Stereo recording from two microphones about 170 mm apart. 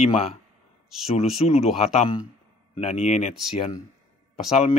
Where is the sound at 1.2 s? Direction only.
35° left (ahead or behind).